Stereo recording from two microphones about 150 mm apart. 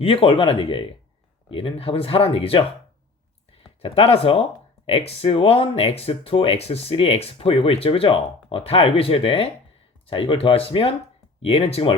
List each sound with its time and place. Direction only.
0.0 s speech: 40° left (ahead or behind)